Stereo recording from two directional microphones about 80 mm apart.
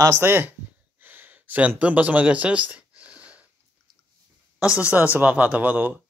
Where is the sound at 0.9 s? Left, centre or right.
Right.